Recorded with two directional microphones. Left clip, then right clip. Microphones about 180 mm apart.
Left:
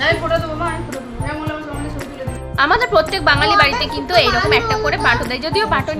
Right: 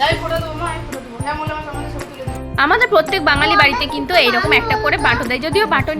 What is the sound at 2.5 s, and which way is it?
A woman's voice, 15° right (ahead or behind).